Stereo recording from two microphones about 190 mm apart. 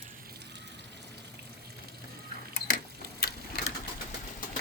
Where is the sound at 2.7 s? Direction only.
55° left (ahead or behind).